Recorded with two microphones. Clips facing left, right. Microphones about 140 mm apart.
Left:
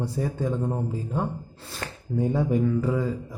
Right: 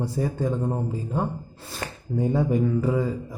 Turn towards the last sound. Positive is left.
turn(degrees=-5)  # may be behind; listen again after turning